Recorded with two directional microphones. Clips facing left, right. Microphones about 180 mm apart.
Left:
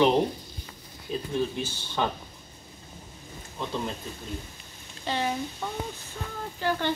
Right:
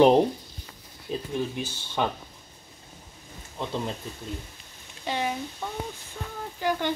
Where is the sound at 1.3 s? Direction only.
15° right (ahead or behind).